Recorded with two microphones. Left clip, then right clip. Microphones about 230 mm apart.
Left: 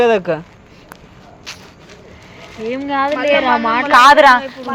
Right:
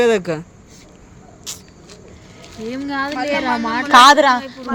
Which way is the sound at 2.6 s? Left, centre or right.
Right.